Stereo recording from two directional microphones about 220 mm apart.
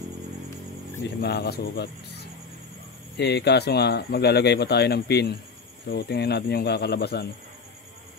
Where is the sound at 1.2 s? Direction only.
45° left (ahead or behind).